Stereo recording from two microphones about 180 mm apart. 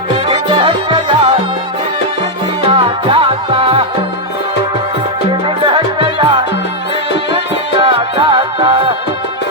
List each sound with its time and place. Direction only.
0.3 s music: 30° right (ahead or behind)
2.6 s music: 30° right (ahead or behind)
5.6 s music: 30° right (ahead or behind)